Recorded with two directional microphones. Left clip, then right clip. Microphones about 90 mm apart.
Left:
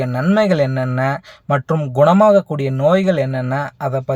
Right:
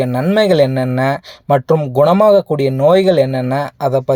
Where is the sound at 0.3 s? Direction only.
30° right (ahead or behind).